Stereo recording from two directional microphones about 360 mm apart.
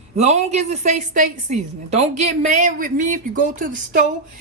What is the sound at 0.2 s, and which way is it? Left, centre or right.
A woman's voice, centre.